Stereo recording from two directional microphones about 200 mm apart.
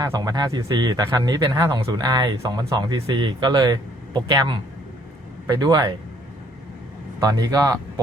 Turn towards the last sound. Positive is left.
turn(degrees=-20)  # may be behind; listen again after turning